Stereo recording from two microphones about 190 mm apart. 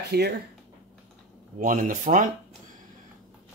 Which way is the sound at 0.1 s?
60° right (ahead or behind).